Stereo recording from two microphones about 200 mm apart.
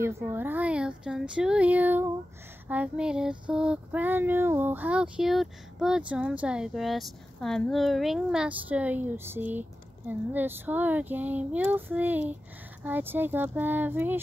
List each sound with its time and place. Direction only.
0.0 s child singing: 10° right (ahead or behind)